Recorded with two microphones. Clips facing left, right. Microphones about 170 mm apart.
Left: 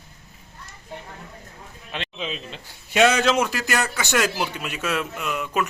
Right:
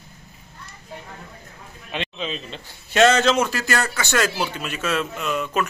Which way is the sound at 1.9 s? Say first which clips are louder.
Right 2 dB; centre (ahead or behind).